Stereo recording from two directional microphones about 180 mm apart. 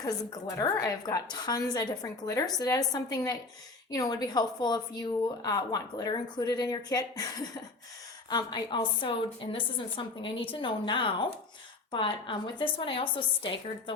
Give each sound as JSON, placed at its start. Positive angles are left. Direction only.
{"t": 0.0, "sound": "a woman's voice", "side_deg": 20}
{"t": 8.3, "sound": "a woman's voice", "side_deg": 25}